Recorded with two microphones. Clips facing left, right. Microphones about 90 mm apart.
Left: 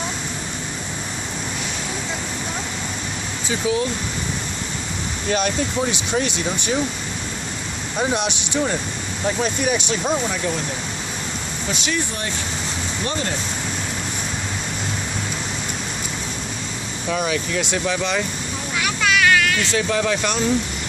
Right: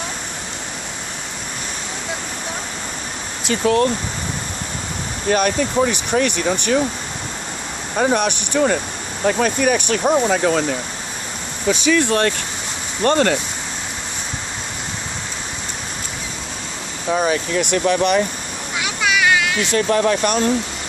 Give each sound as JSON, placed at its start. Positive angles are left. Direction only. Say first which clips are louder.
{"t": 3.4, "sound": "speech", "louder": "right 5 dB", "side_deg": -60}
{"t": 5.3, "sound": "speech", "louder": "right 4 dB", "side_deg": -55}
{"t": 8.0, "sound": "speech", "louder": "right 5 dB", "side_deg": -50}
{"t": 10.2, "sound": "speech", "louder": "right 7 dB", "side_deg": -80}
{"t": 12.0, "sound": "speech", "louder": "right 10 dB", "side_deg": -75}
{"t": 13.0, "sound": "speech", "louder": "right 11 dB", "side_deg": -55}
{"t": 17.2, "sound": "speech", "louder": "right 4 dB", "side_deg": -55}
{"t": 19.0, "sound": "a sound", "louder": "even", "side_deg": -15}
{"t": 19.7, "sound": "speech", "louder": "right 8 dB", "side_deg": -50}